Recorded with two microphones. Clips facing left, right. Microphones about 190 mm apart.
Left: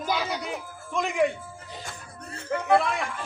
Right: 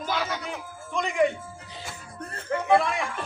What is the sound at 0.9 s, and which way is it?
Speech, centre (ahead or behind).